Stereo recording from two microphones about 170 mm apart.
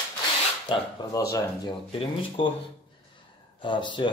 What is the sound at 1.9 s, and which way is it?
Speech, 30° left (ahead or behind).